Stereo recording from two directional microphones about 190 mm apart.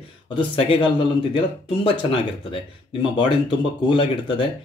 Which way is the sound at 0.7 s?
25° left (ahead or behind).